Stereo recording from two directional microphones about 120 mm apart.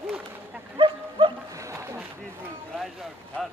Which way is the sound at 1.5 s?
25° right (ahead or behind).